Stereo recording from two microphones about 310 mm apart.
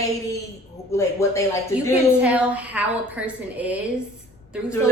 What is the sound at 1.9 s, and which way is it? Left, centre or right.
A woman's voice, centre.